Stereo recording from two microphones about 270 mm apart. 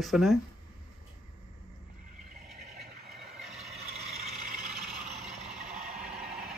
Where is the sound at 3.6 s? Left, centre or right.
Right.